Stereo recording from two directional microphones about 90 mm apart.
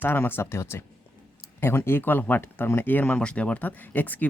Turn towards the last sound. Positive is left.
turn(degrees=20)  # may be behind; listen again after turning